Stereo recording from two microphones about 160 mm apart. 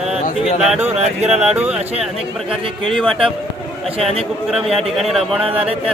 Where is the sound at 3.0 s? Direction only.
Centre (ahead or behind).